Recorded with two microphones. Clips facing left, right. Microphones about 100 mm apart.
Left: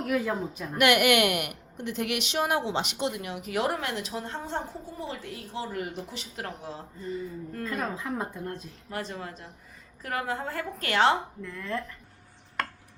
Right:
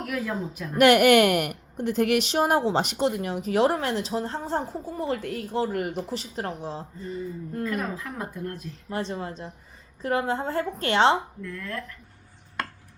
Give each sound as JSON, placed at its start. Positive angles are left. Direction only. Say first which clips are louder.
{"t": 0.0, "sound": "speech", "louder": "left 2 dB", "side_deg": 25}
{"t": 0.8, "sound": "speech", "louder": "right 6 dB", "side_deg": -35}
{"t": 4.9, "sound": "speech", "louder": "right 9 dB", "side_deg": -55}
{"t": 6.1, "sound": "speech", "louder": "right 6 dB", "side_deg": -35}
{"t": 7.6, "sound": "speech", "louder": "right 2 dB", "side_deg": 25}
{"t": 8.9, "sound": "a woman's voice", "louder": "right 5 dB", "side_deg": -25}
{"t": 11.4, "sound": "speech", "louder": "left 1 dB", "side_deg": 20}